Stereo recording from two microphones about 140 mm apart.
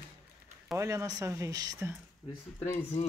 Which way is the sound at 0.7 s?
20° right (ahead or behind).